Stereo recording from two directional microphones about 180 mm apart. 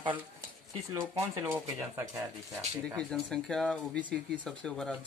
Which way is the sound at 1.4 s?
10° right (ahead or behind).